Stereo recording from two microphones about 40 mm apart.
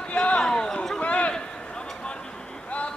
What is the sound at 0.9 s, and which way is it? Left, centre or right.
Run, left.